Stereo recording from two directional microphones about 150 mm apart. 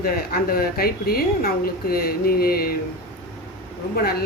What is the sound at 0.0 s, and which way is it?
A woman's voice, 80° left.